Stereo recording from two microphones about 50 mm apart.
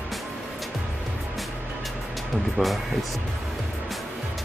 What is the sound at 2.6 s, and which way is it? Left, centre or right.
Speech, right.